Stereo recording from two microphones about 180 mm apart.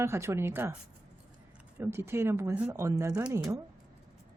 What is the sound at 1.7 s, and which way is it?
Speech, 15° right (ahead or behind).